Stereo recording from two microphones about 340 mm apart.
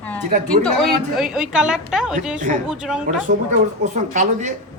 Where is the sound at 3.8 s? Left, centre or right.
Right.